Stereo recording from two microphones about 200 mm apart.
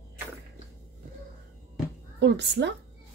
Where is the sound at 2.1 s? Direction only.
60° right (ahead or behind).